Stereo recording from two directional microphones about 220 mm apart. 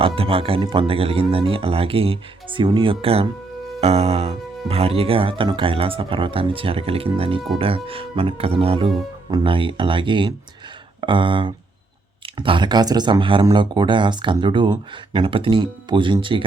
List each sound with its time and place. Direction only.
0.2 s speech: 25° right (ahead or behind)